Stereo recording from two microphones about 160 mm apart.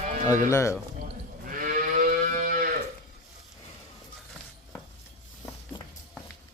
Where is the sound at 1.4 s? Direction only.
55° right (ahead or behind).